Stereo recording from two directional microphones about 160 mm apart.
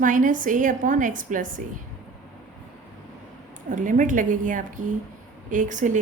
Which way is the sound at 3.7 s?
55° right (ahead or behind).